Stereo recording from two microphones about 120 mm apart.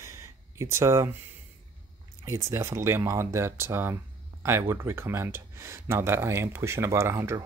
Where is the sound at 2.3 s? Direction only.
25° right (ahead or behind).